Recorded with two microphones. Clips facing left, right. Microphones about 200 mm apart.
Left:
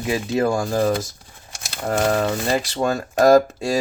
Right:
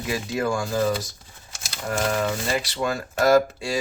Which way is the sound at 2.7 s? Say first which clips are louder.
Left 5 dB; 40° left (ahead or behind).